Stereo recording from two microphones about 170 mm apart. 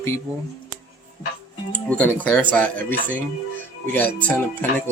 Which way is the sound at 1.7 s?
10° left (ahead or behind).